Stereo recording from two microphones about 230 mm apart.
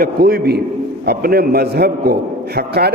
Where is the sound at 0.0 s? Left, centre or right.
Right.